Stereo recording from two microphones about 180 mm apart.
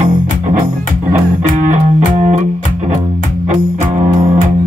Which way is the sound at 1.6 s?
45° right (ahead or behind).